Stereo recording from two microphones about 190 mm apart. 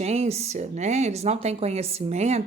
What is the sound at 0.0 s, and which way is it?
Speech, 35° right (ahead or behind).